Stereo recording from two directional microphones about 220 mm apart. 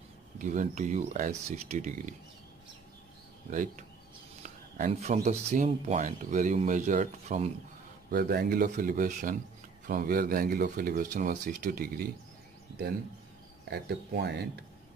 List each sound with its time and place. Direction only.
0.4 s speech: 35° right (ahead or behind)
3.5 s speech: 35° right (ahead or behind)
8.1 s speech: 45° right (ahead or behind)
13.7 s speech: 50° right (ahead or behind)